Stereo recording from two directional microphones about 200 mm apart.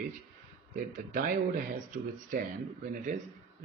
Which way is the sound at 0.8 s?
45° right (ahead or behind).